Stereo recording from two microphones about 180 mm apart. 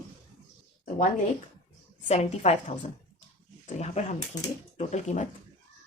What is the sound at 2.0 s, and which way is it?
Speech, 35° left (ahead or behind).